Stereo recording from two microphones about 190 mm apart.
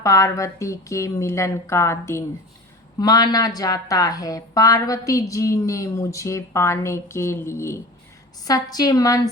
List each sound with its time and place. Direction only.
0.0 s a woman's voice: 15° left (ahead or behind)